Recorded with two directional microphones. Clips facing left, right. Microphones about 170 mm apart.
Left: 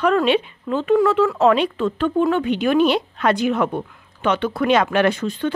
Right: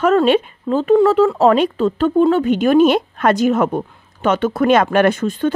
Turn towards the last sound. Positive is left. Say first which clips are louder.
# right 4 dB
turn(degrees=-50)  # may be behind; listen again after turning